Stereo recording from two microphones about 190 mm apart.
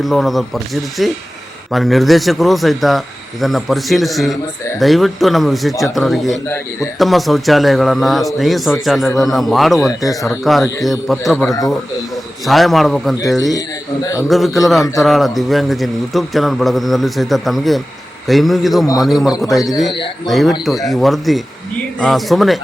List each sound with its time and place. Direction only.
0.0 s a man's voice: centre (ahead or behind)
13.5 s a man's voice: 20° left (ahead or behind)
14.3 s a man's voice: centre (ahead or behind)